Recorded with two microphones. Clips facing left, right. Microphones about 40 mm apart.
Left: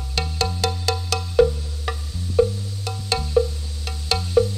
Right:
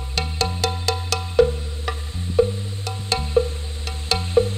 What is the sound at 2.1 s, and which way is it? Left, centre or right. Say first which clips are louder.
Music: even; right.